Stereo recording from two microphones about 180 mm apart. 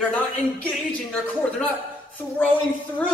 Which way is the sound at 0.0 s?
10° left (ahead or behind).